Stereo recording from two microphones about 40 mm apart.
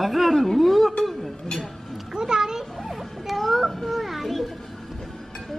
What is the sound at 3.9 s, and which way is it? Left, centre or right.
Children playing, centre.